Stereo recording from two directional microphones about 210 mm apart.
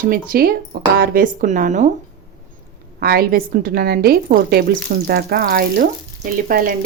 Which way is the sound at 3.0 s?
45° right (ahead or behind).